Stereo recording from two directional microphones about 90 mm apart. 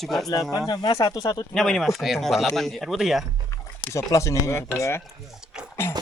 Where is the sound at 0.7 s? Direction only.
55° left (ahead or behind).